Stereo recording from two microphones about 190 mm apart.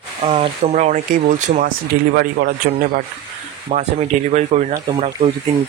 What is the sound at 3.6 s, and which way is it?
Speech, 40° right (ahead or behind).